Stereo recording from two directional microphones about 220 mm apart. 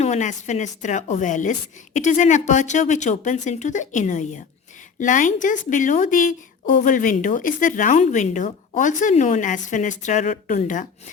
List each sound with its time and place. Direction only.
0.0 s speech: 30° left (ahead or behind)